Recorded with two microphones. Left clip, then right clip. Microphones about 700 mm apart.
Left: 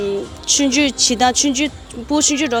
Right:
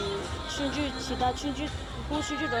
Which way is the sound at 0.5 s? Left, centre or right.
Left.